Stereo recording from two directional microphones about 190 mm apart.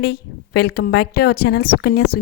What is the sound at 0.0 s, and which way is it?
A woman's voice, 55° left (ahead or behind).